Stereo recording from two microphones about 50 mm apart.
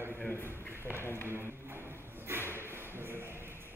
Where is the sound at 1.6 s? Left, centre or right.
Right.